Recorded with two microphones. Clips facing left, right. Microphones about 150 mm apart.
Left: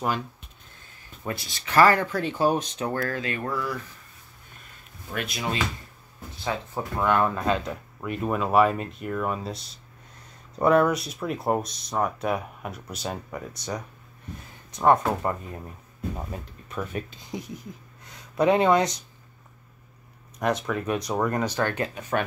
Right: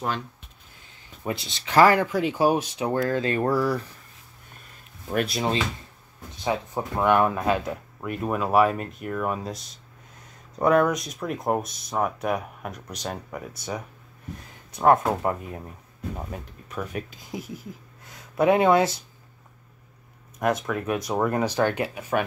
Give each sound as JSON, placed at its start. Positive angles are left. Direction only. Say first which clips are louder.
{"t": 1.2, "sound": "speech", "louder": "right 2 dB", "side_deg": -20}
{"t": 3.2, "sound": "speech", "louder": "right 7 dB", "side_deg": -35}
{"t": 5.1, "sound": "speech", "louder": "right 5 dB", "side_deg": -35}
{"t": 6.3, "sound": "speech", "louder": "right 3 dB", "side_deg": -20}
{"t": 10.6, "sound": "speech", "louder": "even", "side_deg": 0}
{"t": 16.2, "sound": "speech", "louder": "even", "side_deg": 0}
{"t": 20.3, "sound": "speech", "louder": "right 1 dB", "side_deg": 0}